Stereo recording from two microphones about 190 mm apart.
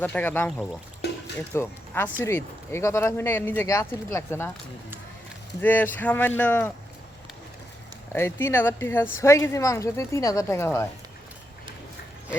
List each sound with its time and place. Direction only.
0.0 s speech: 10° left (ahead or behind)
1.0 s music: 60° left (ahead or behind)
1.5 s speech: 15° left (ahead or behind)
5.5 s speech: 10° left (ahead or behind)
8.1 s speech: 15° left (ahead or behind)